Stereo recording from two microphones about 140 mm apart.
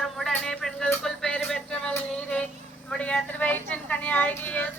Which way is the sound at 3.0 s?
10° left (ahead or behind).